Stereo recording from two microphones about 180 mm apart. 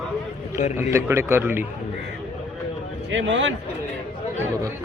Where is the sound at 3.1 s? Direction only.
90° right.